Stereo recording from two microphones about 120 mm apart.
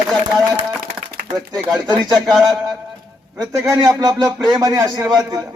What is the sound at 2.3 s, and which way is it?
A man's voice, 30° right (ahead or behind).